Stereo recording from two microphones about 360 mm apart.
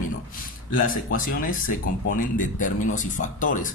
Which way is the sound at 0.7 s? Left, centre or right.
Left.